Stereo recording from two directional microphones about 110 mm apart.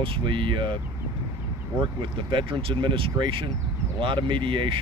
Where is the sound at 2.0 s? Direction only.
50° right (ahead or behind).